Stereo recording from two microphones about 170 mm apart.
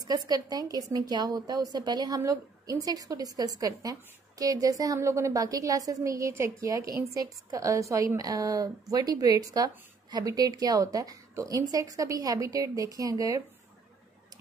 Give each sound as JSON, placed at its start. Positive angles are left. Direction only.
{"t": 0.0, "sound": "a woman's voice", "side_deg": -25}